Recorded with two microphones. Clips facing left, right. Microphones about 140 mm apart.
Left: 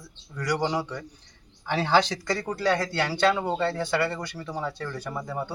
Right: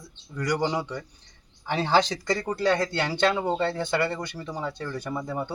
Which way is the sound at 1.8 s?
20° right (ahead or behind).